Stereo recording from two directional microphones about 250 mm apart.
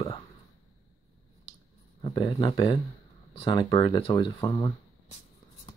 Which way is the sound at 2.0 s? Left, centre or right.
Centre.